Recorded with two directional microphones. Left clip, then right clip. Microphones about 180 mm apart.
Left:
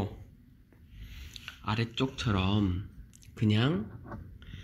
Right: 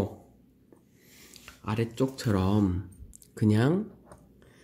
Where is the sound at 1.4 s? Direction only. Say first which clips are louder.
Right 2 dB; 20° right (ahead or behind).